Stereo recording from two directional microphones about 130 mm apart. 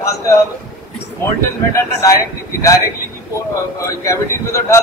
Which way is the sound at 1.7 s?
25° left (ahead or behind).